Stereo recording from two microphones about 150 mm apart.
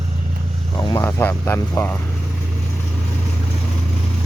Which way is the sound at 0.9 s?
15° left (ahead or behind).